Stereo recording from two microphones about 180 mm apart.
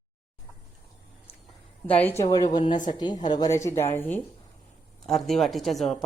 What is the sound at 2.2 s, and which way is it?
A woman's voice, 20° left (ahead or behind).